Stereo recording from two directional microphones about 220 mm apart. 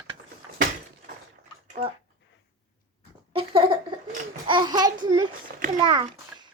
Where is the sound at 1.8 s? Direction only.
25° right (ahead or behind).